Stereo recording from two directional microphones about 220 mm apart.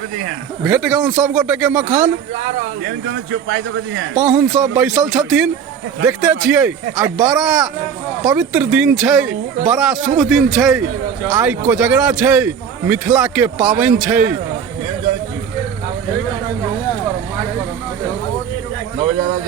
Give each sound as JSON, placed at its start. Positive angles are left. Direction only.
{"t": 0.6, "sound": "speech", "side_deg": -5}
{"t": 2.8, "sound": "speech", "side_deg": -55}
{"t": 4.1, "sound": "speech", "side_deg": -5}